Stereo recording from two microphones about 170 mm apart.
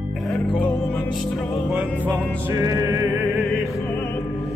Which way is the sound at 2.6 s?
20° right (ahead or behind).